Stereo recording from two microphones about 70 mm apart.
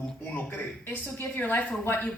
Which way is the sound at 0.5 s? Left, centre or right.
Left.